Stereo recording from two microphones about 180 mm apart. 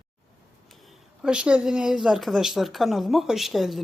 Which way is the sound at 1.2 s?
5° right (ahead or behind).